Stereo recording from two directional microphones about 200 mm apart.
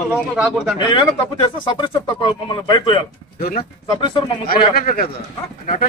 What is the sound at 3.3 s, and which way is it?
Speech, 50° left (ahead or behind).